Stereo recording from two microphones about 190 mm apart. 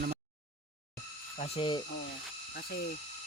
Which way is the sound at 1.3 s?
30° left (ahead or behind).